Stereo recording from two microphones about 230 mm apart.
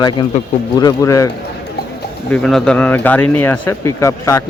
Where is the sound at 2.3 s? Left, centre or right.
Centre.